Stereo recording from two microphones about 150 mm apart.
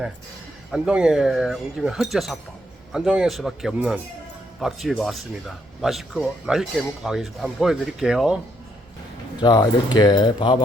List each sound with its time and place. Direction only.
0.7 s speech: 5° right (ahead or behind)
9.4 s speech: 25° left (ahead or behind)